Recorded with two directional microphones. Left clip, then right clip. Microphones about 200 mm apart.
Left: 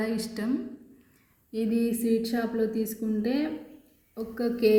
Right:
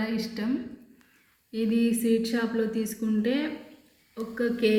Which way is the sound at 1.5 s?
50° left (ahead or behind).